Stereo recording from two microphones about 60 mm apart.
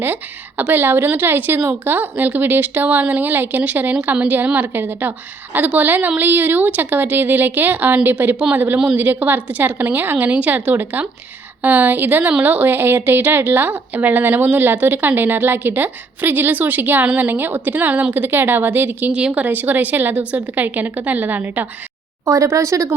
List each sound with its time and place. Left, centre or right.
0.0 s a sound: right
0.7 s a woman's voice: right
22.3 s speech: right